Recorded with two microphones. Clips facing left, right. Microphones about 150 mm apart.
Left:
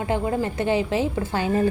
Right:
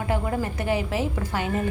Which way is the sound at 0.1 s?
25° left (ahead or behind).